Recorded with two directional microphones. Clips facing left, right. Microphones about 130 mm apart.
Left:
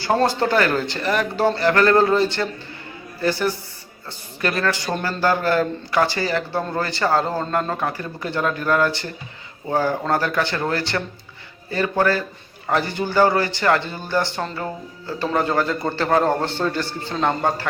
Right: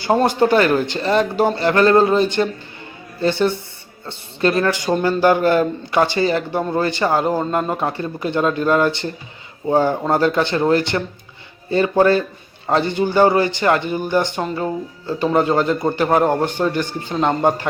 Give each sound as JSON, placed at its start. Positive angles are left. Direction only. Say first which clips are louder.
{"t": 0.0, "sound": "a man's voice", "louder": "right 3 dB", "side_deg": -20}